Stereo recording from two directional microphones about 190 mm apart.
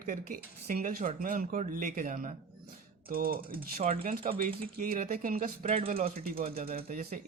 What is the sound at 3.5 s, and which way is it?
Speech, 30° right (ahead or behind).